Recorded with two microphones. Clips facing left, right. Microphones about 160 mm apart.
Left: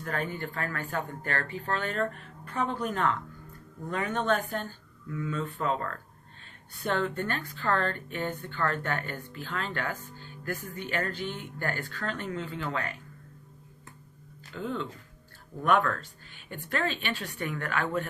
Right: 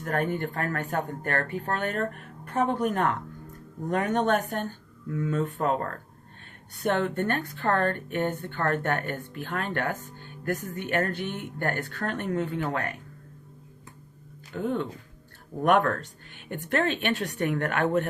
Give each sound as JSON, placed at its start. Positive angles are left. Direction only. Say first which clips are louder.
{"t": 0.0, "sound": "a woman's voice", "louder": "right 6 dB", "side_deg": -55}
{"t": 14.5, "sound": "a woman's voice", "louder": "right 5 dB", "side_deg": -50}